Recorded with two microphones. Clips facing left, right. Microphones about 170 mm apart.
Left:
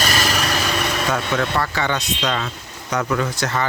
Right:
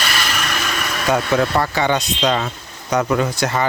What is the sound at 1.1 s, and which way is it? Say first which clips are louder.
Speech: right 7 dB; 20° right (ahead or behind).